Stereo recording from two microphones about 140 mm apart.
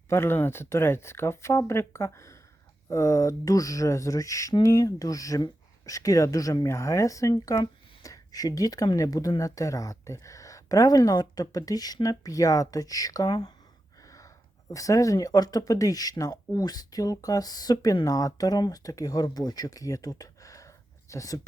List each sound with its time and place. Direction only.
0.1 s speech: 15° left (ahead or behind)
14.7 s speech: 25° left (ahead or behind)